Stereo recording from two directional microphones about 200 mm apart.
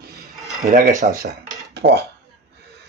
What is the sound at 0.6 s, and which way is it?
Speech, 40° right (ahead or behind).